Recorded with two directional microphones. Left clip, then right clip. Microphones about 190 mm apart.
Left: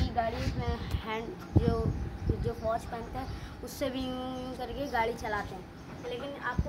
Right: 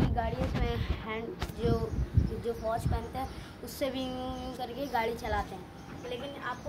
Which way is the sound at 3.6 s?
Centre (ahead or behind).